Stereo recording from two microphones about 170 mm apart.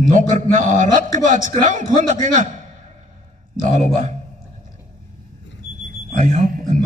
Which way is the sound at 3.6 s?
45° right (ahead or behind).